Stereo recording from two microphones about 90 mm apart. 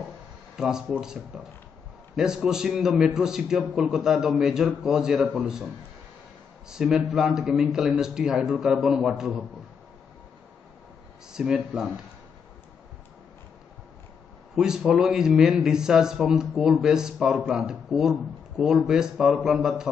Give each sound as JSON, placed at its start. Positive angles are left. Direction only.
{"t": 0.6, "sound": "a man's voice", "side_deg": -5}
{"t": 6.7, "sound": "a man's voice", "side_deg": -5}
{"t": 11.3, "sound": "a man's voice", "side_deg": -5}
{"t": 14.5, "sound": "a man's voice", "side_deg": -5}